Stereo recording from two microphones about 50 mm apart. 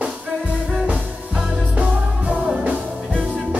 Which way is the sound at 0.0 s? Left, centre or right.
Right.